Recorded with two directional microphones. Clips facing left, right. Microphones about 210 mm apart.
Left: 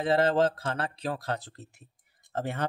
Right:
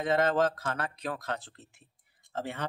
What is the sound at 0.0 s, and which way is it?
Speech, 30° left (ahead or behind).